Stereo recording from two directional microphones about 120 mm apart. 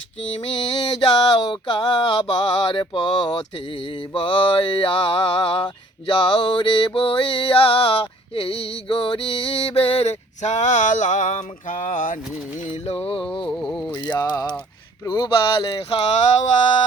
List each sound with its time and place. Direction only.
0.3 s mantra: 50° left (ahead or behind); by 12.2 s 90° left
12.7 s mantra: 55° left (ahead or behind)
13.6 s speech: 5° left (ahead or behind)
14.1 s speech: 30° left (ahead or behind)
15.0 s mantra: 35° left (ahead or behind)